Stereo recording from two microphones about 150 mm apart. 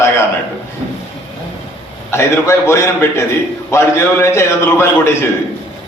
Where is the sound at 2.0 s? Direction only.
15° left (ahead or behind).